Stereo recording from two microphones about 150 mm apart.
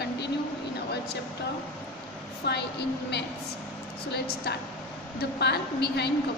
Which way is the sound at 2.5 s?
90° left.